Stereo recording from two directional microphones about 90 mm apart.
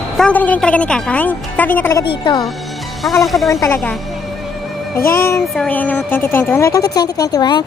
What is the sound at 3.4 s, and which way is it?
Speech, 35° left (ahead or behind).